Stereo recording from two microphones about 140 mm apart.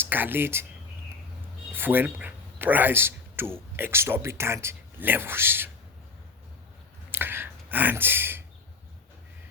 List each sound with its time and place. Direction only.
0.0 s speech: 15° right (ahead or behind)
1.7 s speech: 15° right (ahead or behind)
7.1 s a sound: 15° right (ahead or behind)